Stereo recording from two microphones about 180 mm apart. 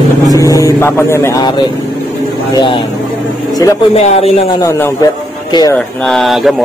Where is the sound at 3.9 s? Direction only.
35° left (ahead or behind).